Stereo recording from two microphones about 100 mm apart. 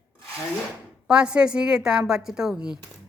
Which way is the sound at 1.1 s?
10° right (ahead or behind).